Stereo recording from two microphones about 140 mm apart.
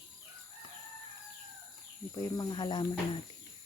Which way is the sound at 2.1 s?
30° left (ahead or behind).